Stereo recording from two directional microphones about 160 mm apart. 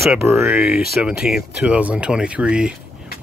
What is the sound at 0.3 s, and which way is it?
Speech, 15° right (ahead or behind).